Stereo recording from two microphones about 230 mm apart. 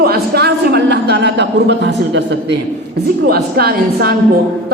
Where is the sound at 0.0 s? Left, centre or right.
Right.